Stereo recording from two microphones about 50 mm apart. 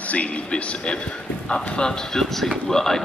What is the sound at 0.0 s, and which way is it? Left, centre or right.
Speech, left.